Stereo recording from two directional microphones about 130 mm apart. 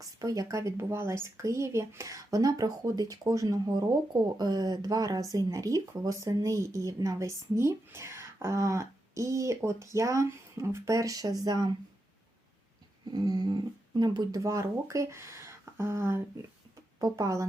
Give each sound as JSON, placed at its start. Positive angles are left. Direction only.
{"t": 0.0, "sound": "speech", "side_deg": -25}
{"t": 13.1, "sound": "speech", "side_deg": -30}